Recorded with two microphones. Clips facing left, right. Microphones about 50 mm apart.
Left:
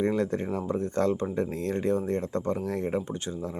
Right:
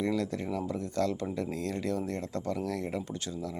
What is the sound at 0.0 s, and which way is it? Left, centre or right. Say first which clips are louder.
Speech: left 4 dB; left.